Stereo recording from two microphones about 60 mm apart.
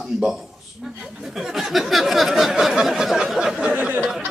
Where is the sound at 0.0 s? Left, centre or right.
Centre.